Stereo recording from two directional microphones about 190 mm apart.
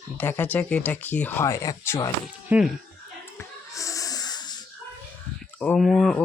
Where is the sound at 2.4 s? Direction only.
5° right (ahead or behind).